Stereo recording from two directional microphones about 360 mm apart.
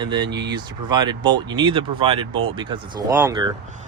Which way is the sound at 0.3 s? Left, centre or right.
Right.